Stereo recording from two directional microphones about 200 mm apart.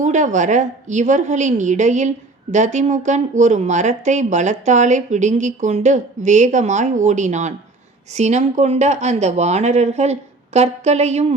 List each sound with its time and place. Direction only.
0.0 s a woman's voice: 35° right (ahead or behind)